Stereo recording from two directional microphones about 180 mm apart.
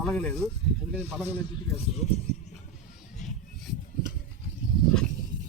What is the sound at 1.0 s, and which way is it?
Speech, 10° right (ahead or behind).